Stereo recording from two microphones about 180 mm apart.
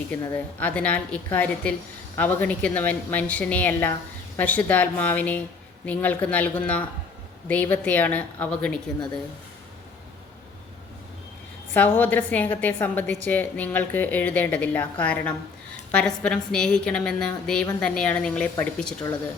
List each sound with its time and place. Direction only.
0.1 s a woman's voice: 10° left (ahead or behind)
11.7 s a woman's voice: 10° left (ahead or behind)